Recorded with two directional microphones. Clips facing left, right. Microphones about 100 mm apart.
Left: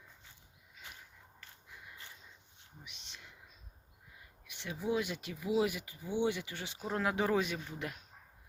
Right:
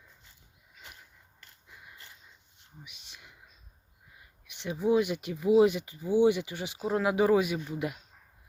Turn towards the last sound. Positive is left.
turn(degrees=-10)  # may be behind; listen again after turning